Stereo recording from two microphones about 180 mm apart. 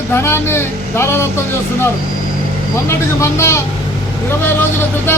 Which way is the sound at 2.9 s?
15° left (ahead or behind).